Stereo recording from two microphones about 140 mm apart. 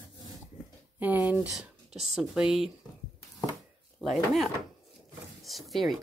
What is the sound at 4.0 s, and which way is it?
Speech, centre (ahead or behind).